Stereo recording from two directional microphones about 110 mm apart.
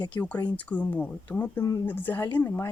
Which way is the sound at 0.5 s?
15° left (ahead or behind).